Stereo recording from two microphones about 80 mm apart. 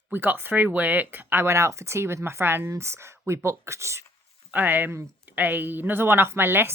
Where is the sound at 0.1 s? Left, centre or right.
Right.